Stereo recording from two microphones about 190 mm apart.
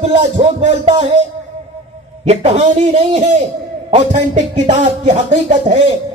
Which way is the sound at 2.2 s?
35° right (ahead or behind).